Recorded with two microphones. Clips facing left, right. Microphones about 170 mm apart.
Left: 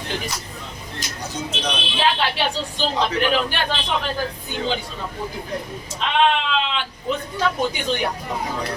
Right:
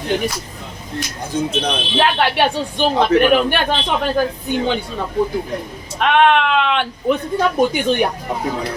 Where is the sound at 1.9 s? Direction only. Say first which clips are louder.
Right 6 dB; 55° right (ahead or behind).